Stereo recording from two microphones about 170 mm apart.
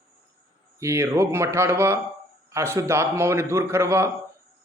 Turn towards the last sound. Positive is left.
turn(degrees=-15)  # may be behind; listen again after turning